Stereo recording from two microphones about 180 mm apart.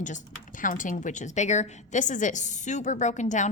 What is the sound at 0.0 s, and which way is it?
A woman's voice, 45° left (ahead or behind).